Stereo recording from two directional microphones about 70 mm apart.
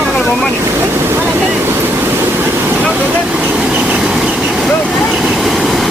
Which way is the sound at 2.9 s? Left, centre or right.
Right.